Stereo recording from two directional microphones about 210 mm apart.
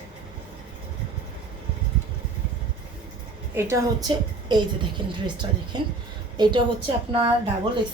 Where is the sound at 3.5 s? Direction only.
15° right (ahead or behind).